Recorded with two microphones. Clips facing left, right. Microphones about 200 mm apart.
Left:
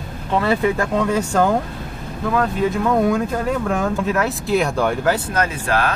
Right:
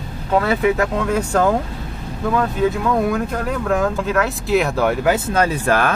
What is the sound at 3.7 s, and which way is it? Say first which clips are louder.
Speech: right 1 dB; centre (ahead or behind).